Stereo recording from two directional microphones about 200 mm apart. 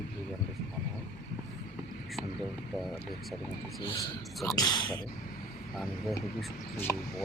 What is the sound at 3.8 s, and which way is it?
Speech, 15° left (ahead or behind).